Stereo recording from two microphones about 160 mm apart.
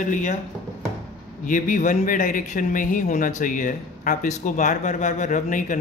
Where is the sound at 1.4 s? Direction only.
55° left (ahead or behind).